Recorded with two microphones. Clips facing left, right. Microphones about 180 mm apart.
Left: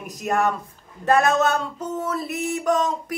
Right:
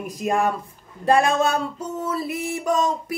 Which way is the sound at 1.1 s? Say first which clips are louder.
Even; 10° right (ahead or behind).